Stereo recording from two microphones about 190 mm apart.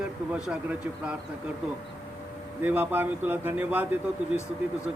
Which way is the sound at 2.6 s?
10° right (ahead or behind).